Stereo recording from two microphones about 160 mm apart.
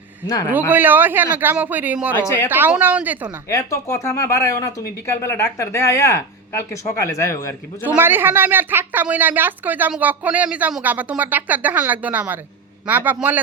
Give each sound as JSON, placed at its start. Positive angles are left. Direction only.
{"t": 0.5, "sound": "a woman's voice", "side_deg": -10}
{"t": 3.5, "sound": "speech", "side_deg": 20}
{"t": 7.9, "sound": "a woman's voice", "side_deg": -10}